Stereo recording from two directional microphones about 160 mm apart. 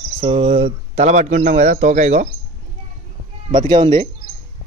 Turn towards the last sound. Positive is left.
turn(degrees=-30)  # may be behind; listen again after turning